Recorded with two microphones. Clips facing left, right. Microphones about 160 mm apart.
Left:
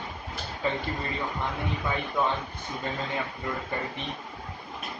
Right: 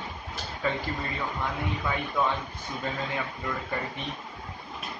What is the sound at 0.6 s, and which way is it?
Speech, 25° left (ahead or behind).